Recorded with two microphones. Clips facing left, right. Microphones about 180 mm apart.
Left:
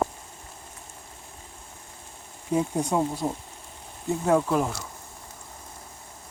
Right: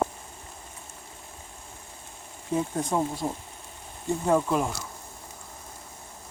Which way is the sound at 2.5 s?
15° left (ahead or behind).